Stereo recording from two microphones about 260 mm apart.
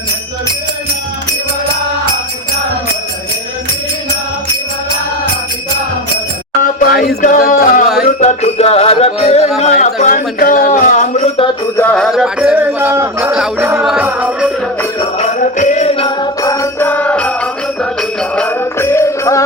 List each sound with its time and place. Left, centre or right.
7.2 s music: left
9.6 s speech: left
11.8 s music: centre
15.2 s music: left; by 19.5 s centre